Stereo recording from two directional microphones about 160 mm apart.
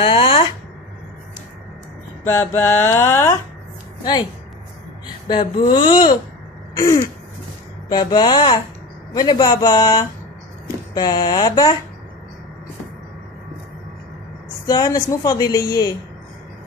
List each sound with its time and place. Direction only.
0.0 s a sound: 30° left (ahead or behind)
2.2 s mantra: 15° left (ahead or behind)
5.3 s speech: 30° left (ahead or behind)
6.7 s throat clearing: 20° left (ahead or behind)
7.9 s speech: 25° left (ahead or behind)
14.7 s speech: 25° left (ahead or behind)